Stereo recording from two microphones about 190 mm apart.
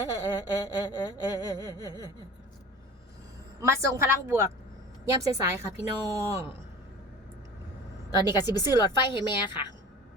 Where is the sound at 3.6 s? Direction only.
15° right (ahead or behind).